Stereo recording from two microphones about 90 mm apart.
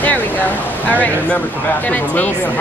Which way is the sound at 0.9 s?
15° left (ahead or behind).